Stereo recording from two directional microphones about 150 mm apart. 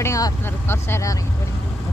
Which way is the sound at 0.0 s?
20° left (ahead or behind).